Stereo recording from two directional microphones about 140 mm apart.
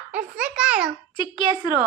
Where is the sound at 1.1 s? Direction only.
35° left (ahead or behind).